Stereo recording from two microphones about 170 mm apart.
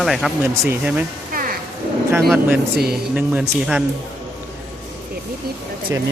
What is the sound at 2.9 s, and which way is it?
Speech, 5° right (ahead or behind).